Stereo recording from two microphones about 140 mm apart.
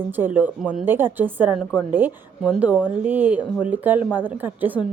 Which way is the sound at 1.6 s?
5° left (ahead or behind).